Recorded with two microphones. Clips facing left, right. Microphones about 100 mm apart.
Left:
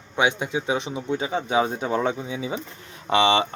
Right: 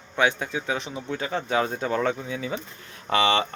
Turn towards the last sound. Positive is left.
turn(degrees=20)  # may be behind; listen again after turning